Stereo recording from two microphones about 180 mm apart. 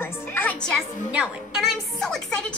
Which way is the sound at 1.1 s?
5° right (ahead or behind).